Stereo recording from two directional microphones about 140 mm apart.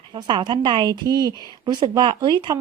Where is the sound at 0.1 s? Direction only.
35° right (ahead or behind).